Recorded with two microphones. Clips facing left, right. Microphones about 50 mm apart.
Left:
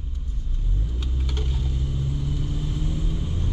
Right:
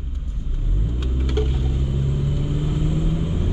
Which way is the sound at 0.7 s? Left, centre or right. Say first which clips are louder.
Right 6 dB; centre.